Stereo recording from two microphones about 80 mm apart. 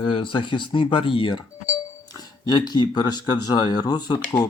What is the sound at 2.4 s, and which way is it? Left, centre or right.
Speech, left.